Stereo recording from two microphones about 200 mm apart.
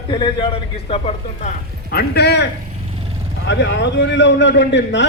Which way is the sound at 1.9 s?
55° left (ahead or behind).